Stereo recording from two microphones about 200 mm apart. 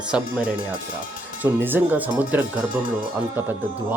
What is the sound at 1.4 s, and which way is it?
Speech, 10° right (ahead or behind).